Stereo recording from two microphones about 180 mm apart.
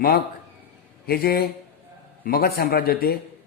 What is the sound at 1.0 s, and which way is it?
A man's voice, 60° left (ahead or behind).